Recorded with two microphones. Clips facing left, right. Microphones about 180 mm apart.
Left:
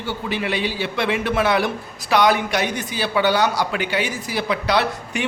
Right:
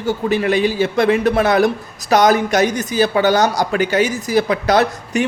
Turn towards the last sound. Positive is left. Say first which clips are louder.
# right 5 dB
turn(degrees=-45)  # may be behind; listen again after turning